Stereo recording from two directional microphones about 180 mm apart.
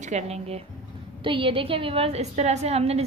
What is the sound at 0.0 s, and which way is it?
A woman's voice, 35° right (ahead or behind).